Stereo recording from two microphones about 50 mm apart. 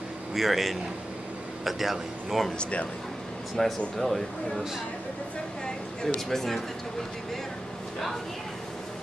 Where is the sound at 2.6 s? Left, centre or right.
Left.